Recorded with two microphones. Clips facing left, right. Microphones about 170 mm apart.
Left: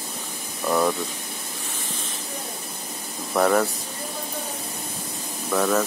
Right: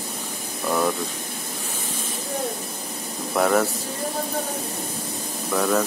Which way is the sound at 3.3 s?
Centre (ahead or behind).